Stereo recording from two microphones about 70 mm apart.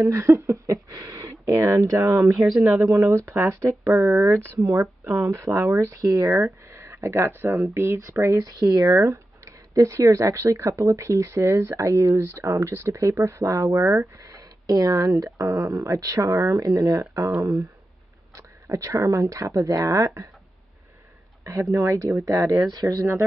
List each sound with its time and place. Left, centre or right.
0.0 s speech: right
2.4 s speech: centre
3.8 s speech: right
5.9 s speech: right
6.7 s speech: right
14.2 s speech: right
18.3 s speech: right
21.7 s speech: right
22.7 s speech: right
22.9 s speech: right